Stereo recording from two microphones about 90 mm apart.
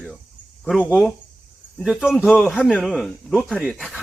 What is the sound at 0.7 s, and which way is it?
Speech, 10° left (ahead or behind).